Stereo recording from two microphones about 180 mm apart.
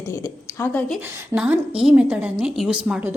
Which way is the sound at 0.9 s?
5° right (ahead or behind).